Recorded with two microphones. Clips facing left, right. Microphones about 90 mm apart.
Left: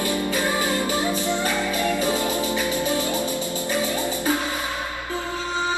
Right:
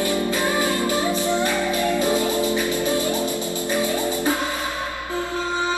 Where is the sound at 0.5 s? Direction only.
20° left (ahead or behind).